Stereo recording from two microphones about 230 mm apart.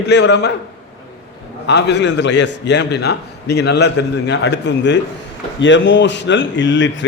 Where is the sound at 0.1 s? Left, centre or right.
Left.